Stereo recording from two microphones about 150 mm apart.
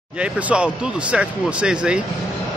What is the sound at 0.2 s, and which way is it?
Speech, 5° right (ahead or behind).